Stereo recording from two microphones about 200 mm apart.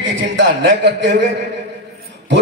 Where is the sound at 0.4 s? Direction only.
60° right (ahead or behind).